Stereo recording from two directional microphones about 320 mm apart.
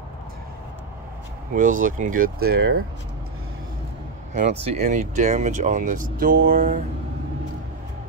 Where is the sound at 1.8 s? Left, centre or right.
Right.